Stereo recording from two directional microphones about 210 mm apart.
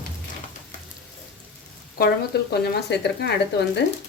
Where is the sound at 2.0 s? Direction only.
45° left (ahead or behind).